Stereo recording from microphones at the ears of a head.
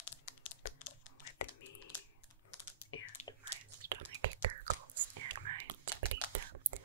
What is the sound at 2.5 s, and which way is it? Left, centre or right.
Typing, left.